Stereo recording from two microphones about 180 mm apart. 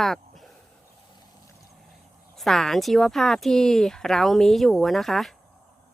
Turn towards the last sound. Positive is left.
turn(degrees=0)  # may be behind; listen again after turning